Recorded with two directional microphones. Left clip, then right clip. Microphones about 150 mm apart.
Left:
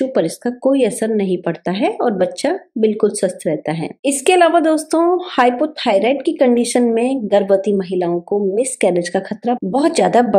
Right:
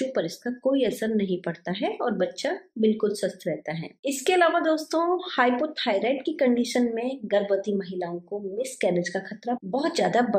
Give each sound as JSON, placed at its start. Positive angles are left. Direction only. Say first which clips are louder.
{"t": 0.1, "sound": "speech", "louder": "left 10 dB", "side_deg": 45}